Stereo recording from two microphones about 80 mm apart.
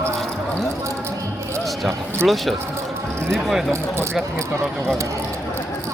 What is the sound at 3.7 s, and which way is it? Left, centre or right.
Speech, right.